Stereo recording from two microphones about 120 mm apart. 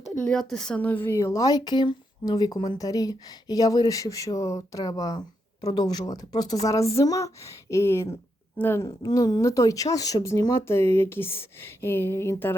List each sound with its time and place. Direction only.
0.2 s a woman's voice: 5° left (ahead or behind)
8.9 s speech: 35° left (ahead or behind)